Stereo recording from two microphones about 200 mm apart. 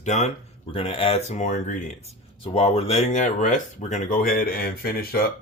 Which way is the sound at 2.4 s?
30° left (ahead or behind).